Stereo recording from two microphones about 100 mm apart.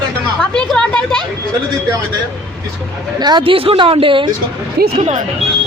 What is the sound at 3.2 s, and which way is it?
Speech, 45° right (ahead or behind).